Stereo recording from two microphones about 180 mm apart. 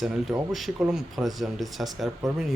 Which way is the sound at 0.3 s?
20° right (ahead or behind).